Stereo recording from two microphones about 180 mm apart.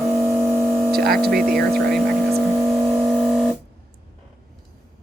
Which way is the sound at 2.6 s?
15° right (ahead or behind).